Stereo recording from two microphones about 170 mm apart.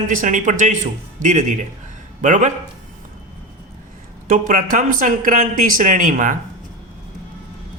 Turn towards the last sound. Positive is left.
turn(degrees=-50)  # may be behind; listen again after turning